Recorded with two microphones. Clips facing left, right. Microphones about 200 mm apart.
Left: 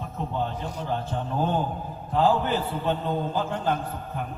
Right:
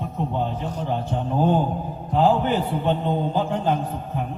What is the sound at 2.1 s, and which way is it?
A man's voice, 15° right (ahead or behind).